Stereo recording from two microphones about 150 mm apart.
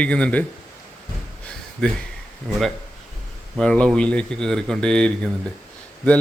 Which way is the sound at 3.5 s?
5° left (ahead or behind).